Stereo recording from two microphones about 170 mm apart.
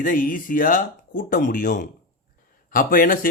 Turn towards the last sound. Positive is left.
turn(degrees=55)  # may be behind; listen again after turning